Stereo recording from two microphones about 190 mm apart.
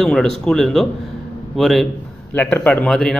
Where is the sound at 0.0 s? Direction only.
Centre (ahead or behind).